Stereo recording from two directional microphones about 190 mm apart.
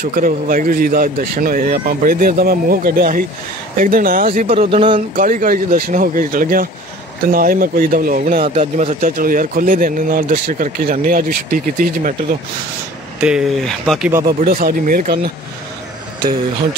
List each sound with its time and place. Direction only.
0.0 s speech: 50° right (ahead or behind)
4.6 s speech: 30° right (ahead or behind)
5.1 s speech: 45° right (ahead or behind)
13.2 s speech: 5° right (ahead or behind)
14.4 s speech: 50° right (ahead or behind)